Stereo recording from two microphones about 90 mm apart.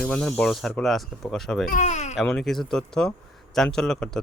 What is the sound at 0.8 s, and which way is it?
Speech, 5° left (ahead or behind).